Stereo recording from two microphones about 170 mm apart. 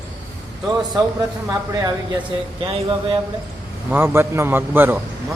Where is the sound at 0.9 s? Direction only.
20° right (ahead or behind).